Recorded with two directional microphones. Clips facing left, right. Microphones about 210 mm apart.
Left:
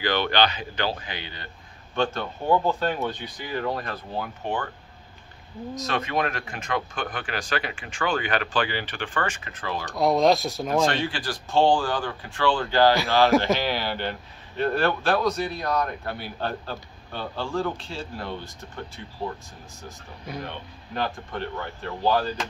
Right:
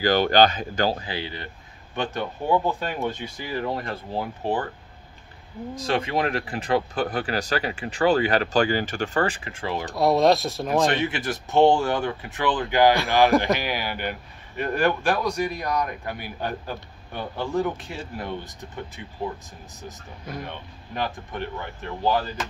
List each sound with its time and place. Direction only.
0.0 s speech: 40° right (ahead or behind)
2.0 s speech: 15° right (ahead or behind)
3.3 s speech: 25° right (ahead or behind)
5.8 s speech: 30° right (ahead or behind)
9.9 s speech: centre (ahead or behind)
10.9 s speech: 20° right (ahead or behind)
20.4 s speech: 15° right (ahead or behind)